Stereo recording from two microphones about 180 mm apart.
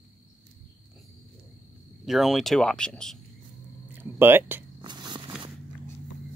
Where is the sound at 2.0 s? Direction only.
Centre (ahead or behind).